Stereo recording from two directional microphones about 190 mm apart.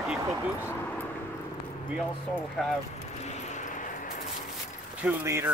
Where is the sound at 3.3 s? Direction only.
40° left (ahead or behind).